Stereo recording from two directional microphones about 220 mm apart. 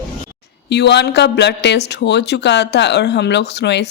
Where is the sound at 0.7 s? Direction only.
50° left (ahead or behind).